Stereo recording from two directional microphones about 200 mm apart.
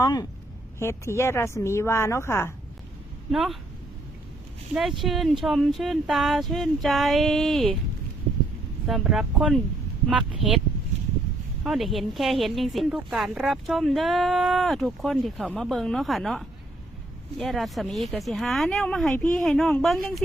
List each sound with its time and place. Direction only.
0.0 s speech: 20° left (ahead or behind)
3.3 s speech: centre (ahead or behind)
4.7 s speech: centre (ahead or behind)
8.9 s speech: centre (ahead or behind)
11.6 s speech: centre (ahead or behind)